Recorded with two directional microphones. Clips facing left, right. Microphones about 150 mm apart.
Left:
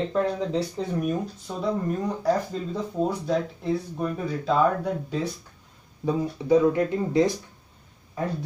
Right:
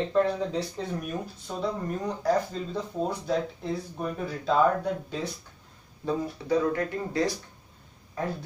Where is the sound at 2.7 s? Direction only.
5° left (ahead or behind).